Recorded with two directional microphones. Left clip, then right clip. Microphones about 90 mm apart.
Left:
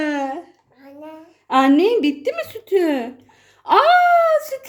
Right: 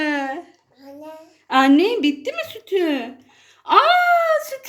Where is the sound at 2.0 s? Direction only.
45° left (ahead or behind).